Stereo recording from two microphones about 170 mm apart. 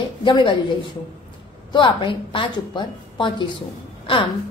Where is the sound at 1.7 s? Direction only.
30° left (ahead or behind).